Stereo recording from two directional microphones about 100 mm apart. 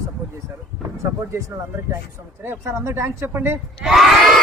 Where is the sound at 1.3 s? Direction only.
30° right (ahead or behind).